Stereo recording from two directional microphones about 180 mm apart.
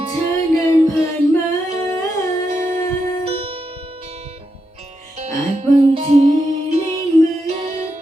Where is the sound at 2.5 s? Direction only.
40° right (ahead or behind).